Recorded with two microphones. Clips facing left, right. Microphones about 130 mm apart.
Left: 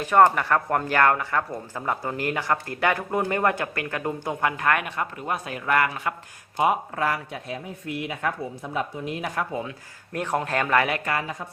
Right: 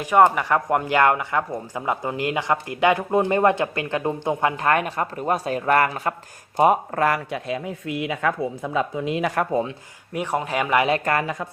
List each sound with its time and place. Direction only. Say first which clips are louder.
0.0 s speech: right 1 dB; 10° right (ahead or behind); by 9.4 s 90° right
9.5 s speech: right 7 dB; 35° right (ahead or behind)
10.1 s speech: right 1 dB; 10° right (ahead or behind)
11.0 s speech: right 5 dB; 55° right (ahead or behind)